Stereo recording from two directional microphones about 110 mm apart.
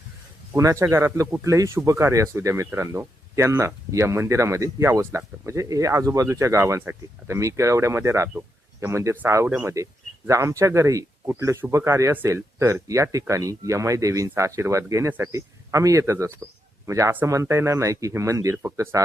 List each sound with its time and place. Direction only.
0.5 s speech: 25° right (ahead or behind)